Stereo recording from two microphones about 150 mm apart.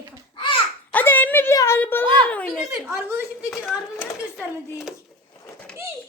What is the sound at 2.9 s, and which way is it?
Speech, 15° right (ahead or behind).